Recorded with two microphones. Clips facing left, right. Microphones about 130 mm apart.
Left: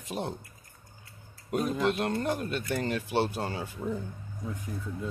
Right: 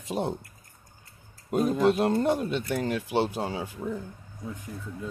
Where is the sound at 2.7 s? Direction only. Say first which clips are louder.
Right 1 dB; 5° right (ahead or behind).